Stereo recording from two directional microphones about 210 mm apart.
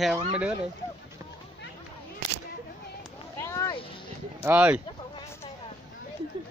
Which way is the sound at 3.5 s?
15° left (ahead or behind).